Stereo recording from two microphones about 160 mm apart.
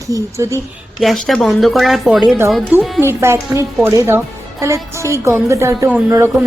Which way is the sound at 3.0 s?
15° right (ahead or behind).